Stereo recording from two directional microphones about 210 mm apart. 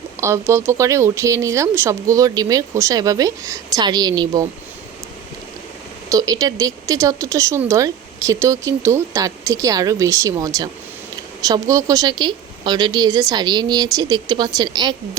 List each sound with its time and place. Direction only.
0.2 s speech: 15° right (ahead or behind)
6.1 s a woman's voice: 15° right (ahead or behind)